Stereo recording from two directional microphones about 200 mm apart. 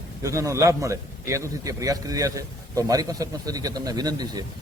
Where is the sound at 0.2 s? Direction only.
15° right (ahead or behind).